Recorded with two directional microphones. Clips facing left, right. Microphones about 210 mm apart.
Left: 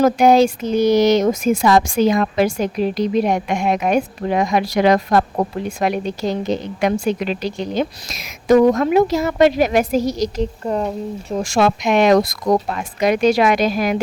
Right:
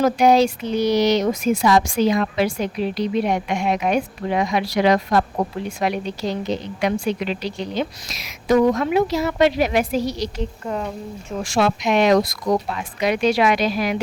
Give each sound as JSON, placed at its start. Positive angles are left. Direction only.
{"t": 0.0, "sound": "speech", "side_deg": 50}